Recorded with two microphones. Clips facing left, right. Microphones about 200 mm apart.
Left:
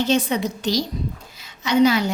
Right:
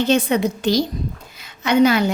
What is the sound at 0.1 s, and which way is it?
A woman's voice, 55° right (ahead or behind).